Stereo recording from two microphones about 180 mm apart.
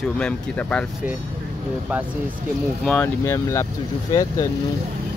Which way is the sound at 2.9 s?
10° left (ahead or behind).